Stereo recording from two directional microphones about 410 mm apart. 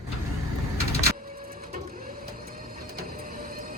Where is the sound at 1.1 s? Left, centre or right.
Right.